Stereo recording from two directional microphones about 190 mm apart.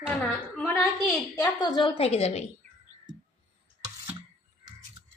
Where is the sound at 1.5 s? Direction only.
25° left (ahead or behind).